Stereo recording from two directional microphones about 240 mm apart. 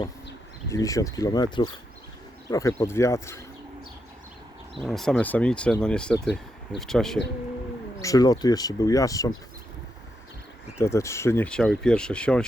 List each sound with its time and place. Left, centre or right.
0.7 s speech: centre
4.8 s speech: centre
8.0 s speech: centre
10.8 s speech: centre